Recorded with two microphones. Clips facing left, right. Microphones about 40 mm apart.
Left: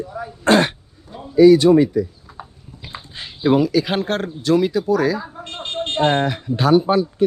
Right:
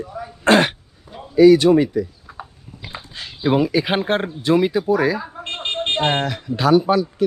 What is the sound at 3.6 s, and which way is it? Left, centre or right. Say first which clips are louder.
Speech: even; right.